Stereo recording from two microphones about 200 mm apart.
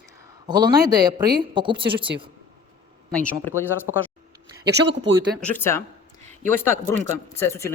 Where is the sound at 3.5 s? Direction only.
10° left (ahead or behind).